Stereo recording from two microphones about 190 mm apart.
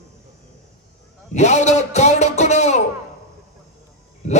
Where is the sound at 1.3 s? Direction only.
35° left (ahead or behind).